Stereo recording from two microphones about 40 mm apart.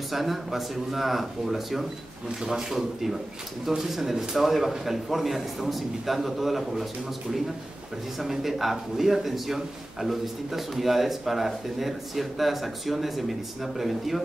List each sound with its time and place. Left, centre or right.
0.1 s a man's voice: centre
8.2 s a man's voice: centre